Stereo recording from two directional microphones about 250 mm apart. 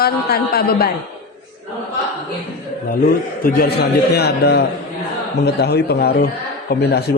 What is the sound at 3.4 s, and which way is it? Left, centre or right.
A woman's voice, left.